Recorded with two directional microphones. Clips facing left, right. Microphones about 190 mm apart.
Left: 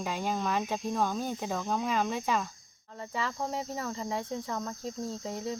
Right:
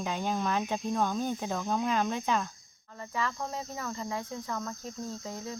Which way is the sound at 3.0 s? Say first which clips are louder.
Even; 25° left (ahead or behind).